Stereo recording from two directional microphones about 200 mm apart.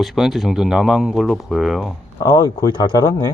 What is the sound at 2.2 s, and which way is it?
Speech, 15° left (ahead or behind).